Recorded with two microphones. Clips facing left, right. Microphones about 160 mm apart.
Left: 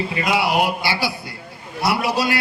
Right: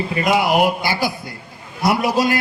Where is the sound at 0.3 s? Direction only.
45° right (ahead or behind).